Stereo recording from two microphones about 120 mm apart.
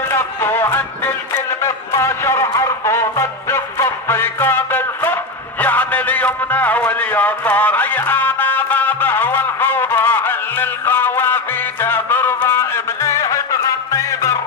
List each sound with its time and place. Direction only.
0.1 s music: 20° left (ahead or behind)